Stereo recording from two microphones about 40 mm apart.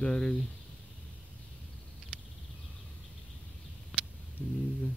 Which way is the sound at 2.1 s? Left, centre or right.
Right.